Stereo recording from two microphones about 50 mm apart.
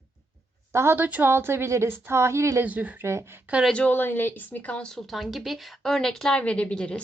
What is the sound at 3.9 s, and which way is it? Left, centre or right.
Speech, left.